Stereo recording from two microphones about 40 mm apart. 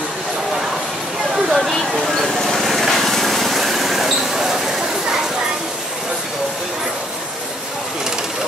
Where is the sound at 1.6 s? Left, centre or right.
Centre.